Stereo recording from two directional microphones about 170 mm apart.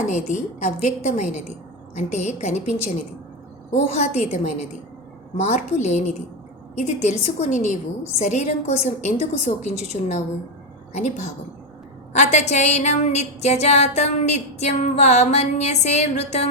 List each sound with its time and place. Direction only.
0.1 s a woman's voice: 45° left (ahead or behind)